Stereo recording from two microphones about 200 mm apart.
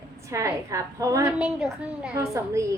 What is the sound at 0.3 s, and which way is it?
A woman's voice, 15° right (ahead or behind).